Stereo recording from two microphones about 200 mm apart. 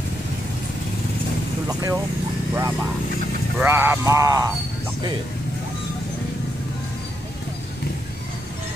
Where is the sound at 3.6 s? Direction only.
10° right (ahead or behind).